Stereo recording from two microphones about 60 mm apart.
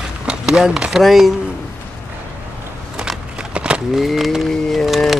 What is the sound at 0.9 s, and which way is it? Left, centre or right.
Speech, centre.